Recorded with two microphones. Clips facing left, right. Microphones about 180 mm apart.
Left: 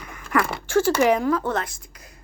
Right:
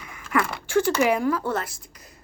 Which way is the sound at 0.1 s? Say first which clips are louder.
Left 2 dB; 45° left (ahead or behind).